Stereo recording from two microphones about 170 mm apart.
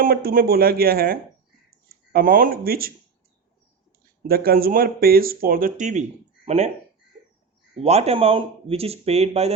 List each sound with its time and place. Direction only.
0.0 s speech: 60° right (ahead or behind)
4.3 s speech: 60° right (ahead or behind); by 6.7 s 40° right (ahead or behind)
7.8 s speech: 40° right (ahead or behind)